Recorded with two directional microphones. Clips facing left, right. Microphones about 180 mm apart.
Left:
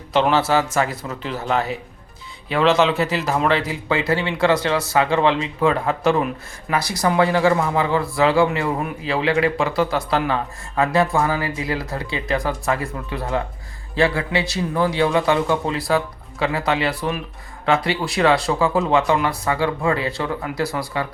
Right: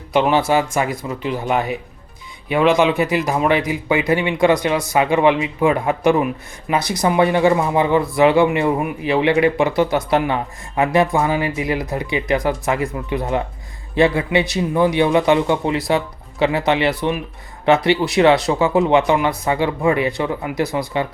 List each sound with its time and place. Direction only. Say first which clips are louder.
0.1 s speech: right 2 dB; 15° right (ahead or behind)